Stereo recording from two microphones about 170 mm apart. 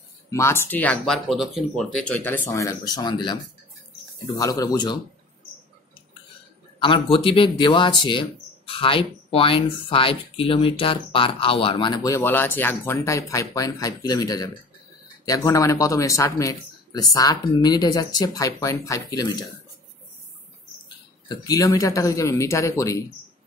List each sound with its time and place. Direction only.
0.3 s speech: 15° left (ahead or behind)
4.4 s speech: 20° left (ahead or behind)
6.8 s speech: 30° left (ahead or behind)
21.3 s speech: 20° left (ahead or behind)